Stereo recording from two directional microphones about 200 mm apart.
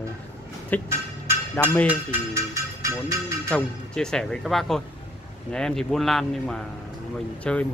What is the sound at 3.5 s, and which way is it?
Speech, 5° left (ahead or behind).